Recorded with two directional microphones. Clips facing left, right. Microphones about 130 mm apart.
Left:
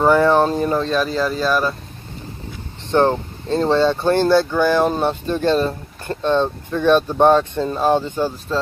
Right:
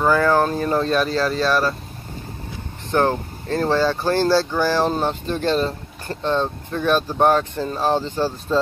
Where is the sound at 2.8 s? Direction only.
20° left (ahead or behind).